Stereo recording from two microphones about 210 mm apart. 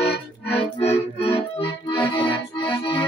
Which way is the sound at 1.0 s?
30° left (ahead or behind).